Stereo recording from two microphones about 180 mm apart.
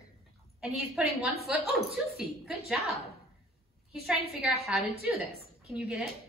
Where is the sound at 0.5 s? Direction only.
5° right (ahead or behind).